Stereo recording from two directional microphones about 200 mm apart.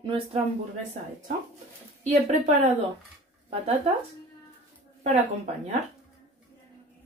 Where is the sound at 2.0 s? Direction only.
35° right (ahead or behind).